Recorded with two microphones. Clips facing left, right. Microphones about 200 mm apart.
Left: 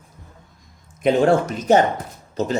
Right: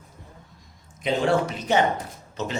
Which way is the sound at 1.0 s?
45° left (ahead or behind).